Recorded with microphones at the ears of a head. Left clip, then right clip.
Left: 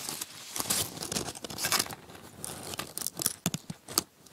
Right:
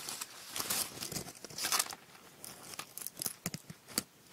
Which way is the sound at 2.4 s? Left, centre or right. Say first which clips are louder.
Left 8 dB; left.